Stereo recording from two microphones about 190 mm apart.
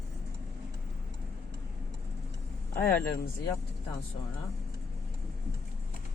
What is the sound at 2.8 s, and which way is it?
Speech, 55° left (ahead or behind).